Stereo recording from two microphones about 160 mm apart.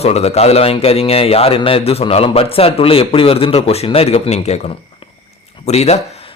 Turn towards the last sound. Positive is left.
turn(degrees=40)  # may be behind; listen again after turning